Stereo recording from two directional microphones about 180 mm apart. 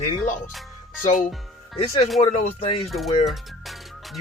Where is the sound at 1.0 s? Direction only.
45° left (ahead or behind).